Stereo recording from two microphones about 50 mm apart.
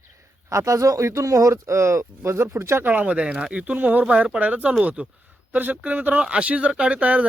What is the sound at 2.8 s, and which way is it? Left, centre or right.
Speech, right.